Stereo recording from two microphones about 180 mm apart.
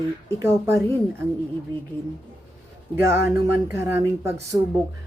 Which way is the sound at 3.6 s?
15° right (ahead or behind).